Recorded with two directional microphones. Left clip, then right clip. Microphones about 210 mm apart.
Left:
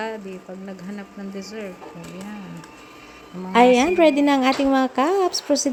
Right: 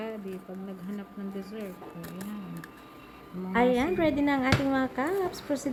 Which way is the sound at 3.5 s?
30° left (ahead or behind).